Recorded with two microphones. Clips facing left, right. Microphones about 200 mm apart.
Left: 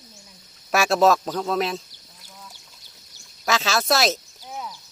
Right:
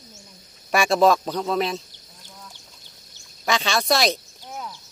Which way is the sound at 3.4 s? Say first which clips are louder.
Even; centre (ahead or behind).